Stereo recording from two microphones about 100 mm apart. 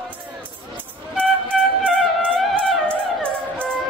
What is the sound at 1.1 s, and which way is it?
Music, 10° left (ahead or behind).